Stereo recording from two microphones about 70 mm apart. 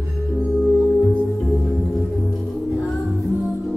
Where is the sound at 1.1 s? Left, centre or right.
Centre.